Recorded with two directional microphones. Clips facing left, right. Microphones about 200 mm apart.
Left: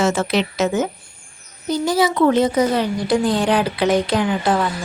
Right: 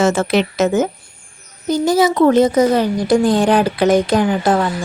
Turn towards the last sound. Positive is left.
turn(degrees=-45)  # may be behind; listen again after turning